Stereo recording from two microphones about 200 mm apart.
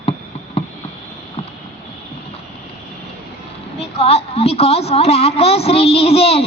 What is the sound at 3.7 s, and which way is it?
A woman's voice, 30° left (ahead or behind).